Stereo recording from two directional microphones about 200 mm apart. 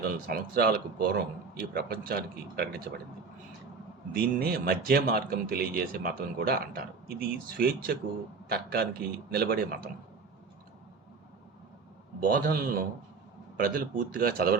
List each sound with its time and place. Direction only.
0.0 s speech: 45° right (ahead or behind)
4.1 s speech: 50° right (ahead or behind)
12.2 s speech: 45° right (ahead or behind)